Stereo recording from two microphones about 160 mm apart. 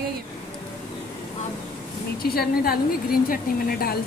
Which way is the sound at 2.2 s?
70° left (ahead or behind).